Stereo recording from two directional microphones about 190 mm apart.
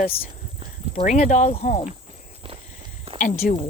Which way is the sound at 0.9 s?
40° left (ahead or behind).